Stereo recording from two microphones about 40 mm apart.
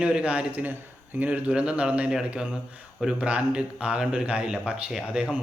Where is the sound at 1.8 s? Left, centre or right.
Right.